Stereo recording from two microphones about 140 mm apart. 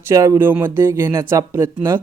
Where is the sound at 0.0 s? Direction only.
20° right (ahead or behind).